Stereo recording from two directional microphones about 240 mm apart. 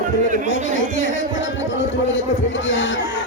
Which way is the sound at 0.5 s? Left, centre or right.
Right.